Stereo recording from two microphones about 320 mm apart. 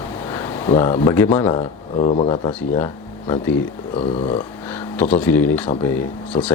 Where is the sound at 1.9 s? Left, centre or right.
Left.